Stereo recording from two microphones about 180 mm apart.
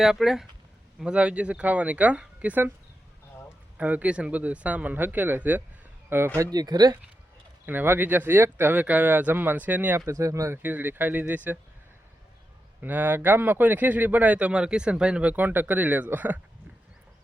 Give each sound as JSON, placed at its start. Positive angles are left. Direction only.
{"t": 0.0, "sound": "speech", "side_deg": 0}
{"t": 3.8, "sound": "speech", "side_deg": -10}
{"t": 7.7, "sound": "speech", "side_deg": -10}
{"t": 12.8, "sound": "speech", "side_deg": -10}